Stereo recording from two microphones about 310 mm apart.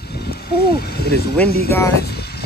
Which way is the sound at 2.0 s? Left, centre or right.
Left.